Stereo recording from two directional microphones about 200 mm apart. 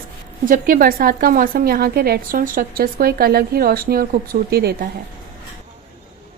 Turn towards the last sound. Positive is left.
turn(degrees=-50)  # may be behind; listen again after turning